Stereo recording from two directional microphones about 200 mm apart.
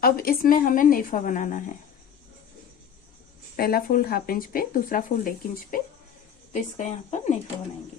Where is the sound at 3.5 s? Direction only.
50° left (ahead or behind).